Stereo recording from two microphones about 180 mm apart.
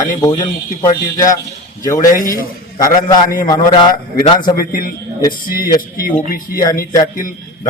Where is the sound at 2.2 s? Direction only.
50° left (ahead or behind).